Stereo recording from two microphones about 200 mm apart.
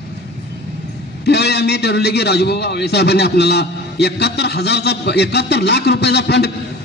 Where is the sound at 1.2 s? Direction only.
55° left (ahead or behind).